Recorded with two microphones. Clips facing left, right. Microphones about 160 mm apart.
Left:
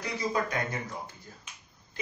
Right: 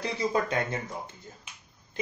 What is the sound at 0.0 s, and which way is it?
Speech, 25° right (ahead or behind).